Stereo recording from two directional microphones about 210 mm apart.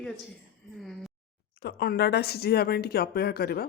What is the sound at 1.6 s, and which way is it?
Speech, 50° left (ahead or behind).